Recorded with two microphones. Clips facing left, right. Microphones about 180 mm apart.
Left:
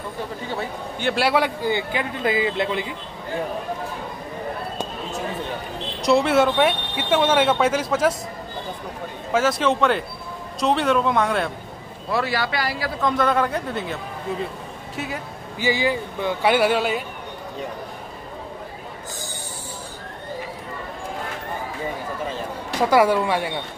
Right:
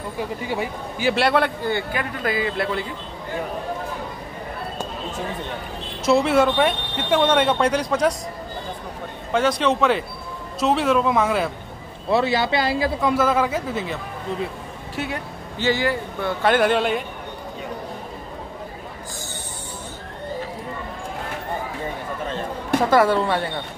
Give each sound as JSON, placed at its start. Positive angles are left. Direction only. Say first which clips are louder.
{"t": 0.5, "sound": "a man's voice", "louder": "right 2 dB", "side_deg": -10}
{"t": 6.0, "sound": "speech", "louder": "even", "side_deg": 0}
{"t": 9.3, "sound": "speech", "louder": "even", "side_deg": 0}
{"t": 12.1, "sound": "speech", "louder": "right 4 dB", "side_deg": -25}
{"t": 13.0, "sound": "speech", "louder": "left 1 dB", "side_deg": -5}
{"t": 15.0, "sound": "speech", "louder": "right 2 dB", "side_deg": 0}
{"t": 15.7, "sound": "a man's voice", "louder": "even", "side_deg": 15}
{"t": 22.8, "sound": "a man's voice", "louder": "even", "side_deg": 10}